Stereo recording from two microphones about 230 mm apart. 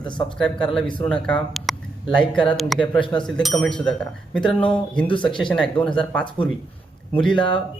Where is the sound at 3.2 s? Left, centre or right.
Centre.